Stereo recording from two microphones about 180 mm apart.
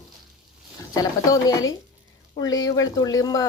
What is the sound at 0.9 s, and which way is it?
Speech, 20° left (ahead or behind).